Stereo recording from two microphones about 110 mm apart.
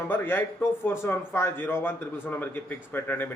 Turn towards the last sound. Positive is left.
turn(degrees=15)  # may be behind; listen again after turning